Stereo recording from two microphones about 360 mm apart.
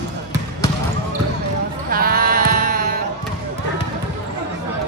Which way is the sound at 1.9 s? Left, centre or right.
Right.